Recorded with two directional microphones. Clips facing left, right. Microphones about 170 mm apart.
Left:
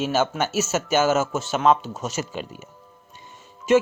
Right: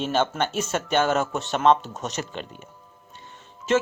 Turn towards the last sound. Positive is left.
turn(degrees=10)  # may be behind; listen again after turning